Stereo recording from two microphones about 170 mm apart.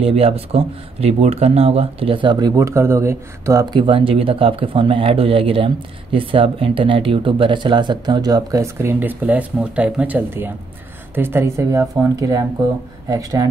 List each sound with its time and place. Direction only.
0.0 s speech: 35° right (ahead or behind)